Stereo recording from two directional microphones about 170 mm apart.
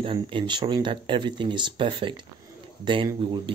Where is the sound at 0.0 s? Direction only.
30° right (ahead or behind).